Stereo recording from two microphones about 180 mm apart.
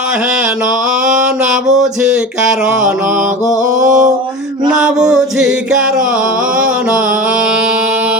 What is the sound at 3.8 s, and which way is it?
Mantra, 45° right (ahead or behind).